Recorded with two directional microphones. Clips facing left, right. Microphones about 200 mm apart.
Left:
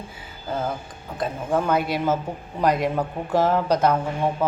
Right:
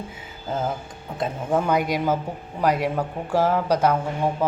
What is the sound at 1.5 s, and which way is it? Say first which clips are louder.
Speech: even; 15° right (ahead or behind).